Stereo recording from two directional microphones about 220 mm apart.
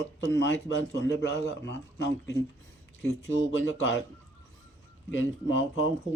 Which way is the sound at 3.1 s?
60° left (ahead or behind).